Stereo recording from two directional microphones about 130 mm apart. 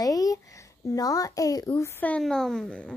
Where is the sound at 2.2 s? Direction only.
5° left (ahead or behind).